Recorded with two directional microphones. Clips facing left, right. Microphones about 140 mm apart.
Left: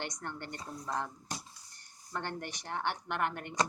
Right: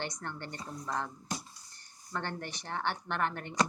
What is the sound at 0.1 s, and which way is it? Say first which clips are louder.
A woman's voice: even; 15° left (ahead or behind).